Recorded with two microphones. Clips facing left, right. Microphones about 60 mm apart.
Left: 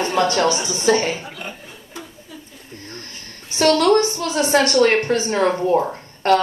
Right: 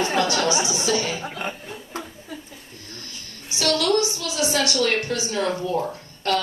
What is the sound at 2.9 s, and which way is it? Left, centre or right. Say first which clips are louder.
A woman's voice: left 1 dB; left.